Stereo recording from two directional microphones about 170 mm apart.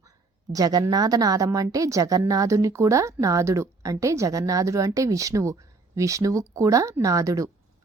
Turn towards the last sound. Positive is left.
turn(degrees=-20)  # may be behind; listen again after turning